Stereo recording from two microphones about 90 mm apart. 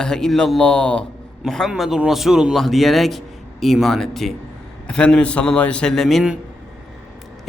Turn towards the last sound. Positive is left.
turn(degrees=5)  # may be behind; listen again after turning